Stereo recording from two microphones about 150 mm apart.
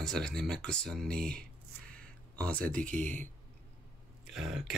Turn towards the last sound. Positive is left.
turn(degrees=0)  # may be behind; listen again after turning